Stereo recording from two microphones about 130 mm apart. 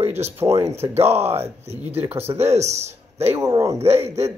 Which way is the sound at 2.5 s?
60° right (ahead or behind).